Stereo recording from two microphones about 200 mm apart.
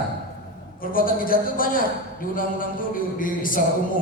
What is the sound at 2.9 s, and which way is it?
Speech, 45° left (ahead or behind).